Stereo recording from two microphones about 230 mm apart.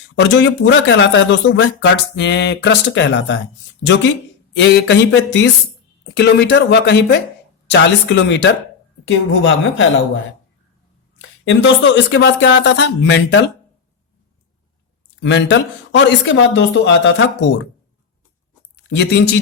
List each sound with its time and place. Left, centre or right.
0.2 s speech: left
4.5 s speech: left
11.2 s a sound: left
12.1 s speech: left
15.2 s speech: left
18.9 s speech: left